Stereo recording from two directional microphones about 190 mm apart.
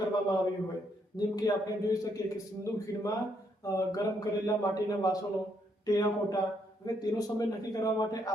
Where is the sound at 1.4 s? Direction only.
20° left (ahead or behind).